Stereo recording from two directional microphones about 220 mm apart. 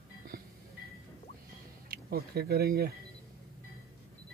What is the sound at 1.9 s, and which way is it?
Speech, 45° right (ahead or behind).